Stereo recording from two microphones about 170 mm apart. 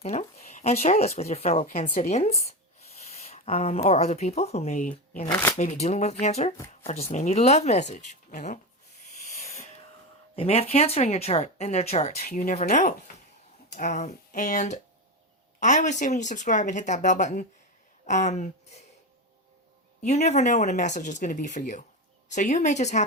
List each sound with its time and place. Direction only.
0.0 s speech: 40° left (ahead or behind)
3.0 s a sound: 40° left (ahead or behind)
3.8 s speech: 40° left (ahead or behind)
9.3 s a sound: 40° left (ahead or behind)
10.3 s speech: 35° left (ahead or behind)
12.2 s speech: 55° left (ahead or behind)
20.1 s speech: 40° left (ahead or behind)